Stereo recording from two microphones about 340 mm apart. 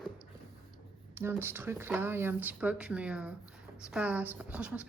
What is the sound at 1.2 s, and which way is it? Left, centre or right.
A woman's voice, centre.